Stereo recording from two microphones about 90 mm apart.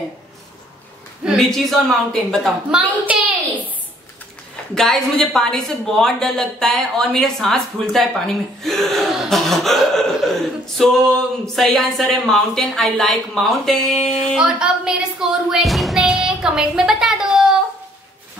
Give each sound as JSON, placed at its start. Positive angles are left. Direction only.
{"t": 1.3, "sound": "a woman's voice", "side_deg": 5}
{"t": 3.1, "sound": "a sound", "side_deg": -15}
{"t": 4.7, "sound": "a woman's voice", "side_deg": 5}